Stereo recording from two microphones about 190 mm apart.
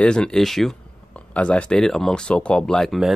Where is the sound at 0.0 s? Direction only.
5° left (ahead or behind).